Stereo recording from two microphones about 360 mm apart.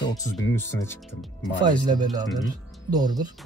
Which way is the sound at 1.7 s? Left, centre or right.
Centre.